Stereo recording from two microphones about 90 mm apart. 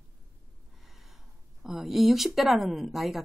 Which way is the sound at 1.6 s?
5° right (ahead or behind).